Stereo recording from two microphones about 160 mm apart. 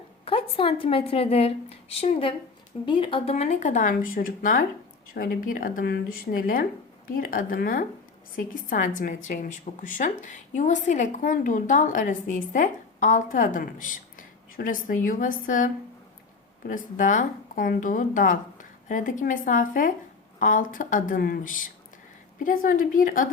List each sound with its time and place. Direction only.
0.3 s a woman's voice: 35° left (ahead or behind); by 23.3 s 60° left (ahead or behind)